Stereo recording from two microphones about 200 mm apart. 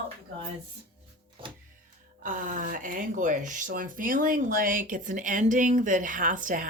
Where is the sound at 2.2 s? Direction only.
40° right (ahead or behind).